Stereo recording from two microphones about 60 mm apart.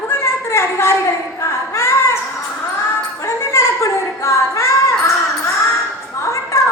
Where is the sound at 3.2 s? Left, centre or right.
Left.